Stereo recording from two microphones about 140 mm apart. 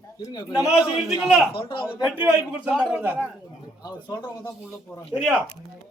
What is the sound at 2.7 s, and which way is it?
Speech, centre (ahead or behind).